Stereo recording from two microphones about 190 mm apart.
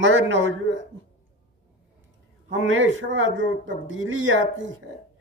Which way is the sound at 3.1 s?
80° right.